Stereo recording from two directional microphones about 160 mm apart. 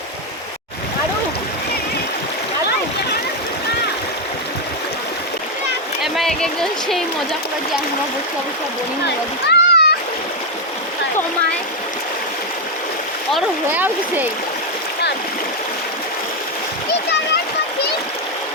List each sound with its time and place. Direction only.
6.0 s speech: centre (ahead or behind)
9.0 s a child's voice: 90° left
13.7 s speech: 10° right (ahead or behind)